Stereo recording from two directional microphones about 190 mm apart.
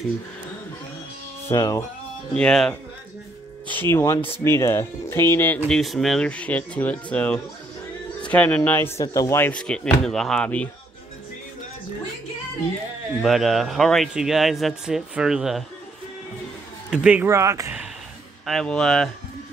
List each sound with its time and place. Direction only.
1.5 s speech: 15° left (ahead or behind)
2.3 s speech: 5° left (ahead or behind)
3.9 s speech: 15° left (ahead or behind)
13.2 s speech: centre (ahead or behind)
16.9 s speech: 5° right (ahead or behind)
18.4 s speech: centre (ahead or behind)